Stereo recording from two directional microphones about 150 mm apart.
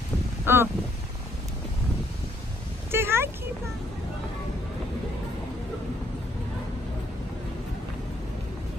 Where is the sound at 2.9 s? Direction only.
15° right (ahead or behind).